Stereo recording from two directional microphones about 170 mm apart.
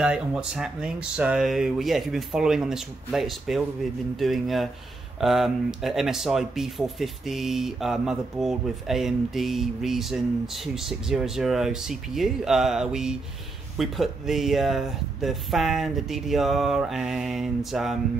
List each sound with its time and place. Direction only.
0.0 s speech: 5° right (ahead or behind)